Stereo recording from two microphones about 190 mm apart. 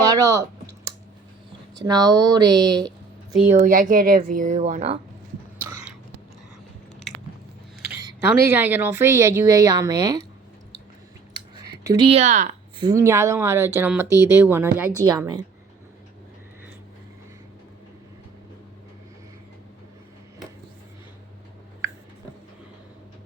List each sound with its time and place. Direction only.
0.0 s a sound: 20° right (ahead or behind)
1.7 s speech: 20° right (ahead or behind)
3.5 s speech: 40° right (ahead or behind)
7.9 s a woman's voice: 10° right (ahead or behind)
11.8 s speech: 20° right (ahead or behind)
12.0 s speech: 35° right (ahead or behind)
12.8 s a woman's voice: 15° right (ahead or behind)